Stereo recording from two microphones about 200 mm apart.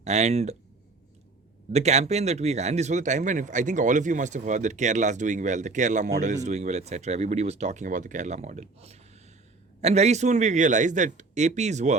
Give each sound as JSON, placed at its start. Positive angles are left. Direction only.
{"t": 0.0, "sound": "speech", "side_deg": -35}
{"t": 1.7, "sound": "speech", "side_deg": -35}